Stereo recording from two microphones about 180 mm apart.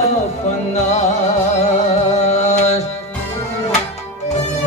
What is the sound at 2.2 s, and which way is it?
Music, 40° left (ahead or behind).